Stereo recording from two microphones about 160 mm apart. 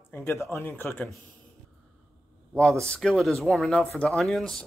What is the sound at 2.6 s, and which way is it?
Speech, centre (ahead or behind).